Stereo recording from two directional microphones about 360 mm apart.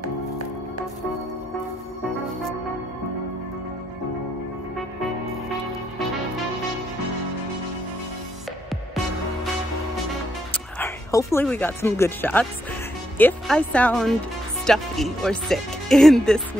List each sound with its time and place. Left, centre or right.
10.5 s speech: centre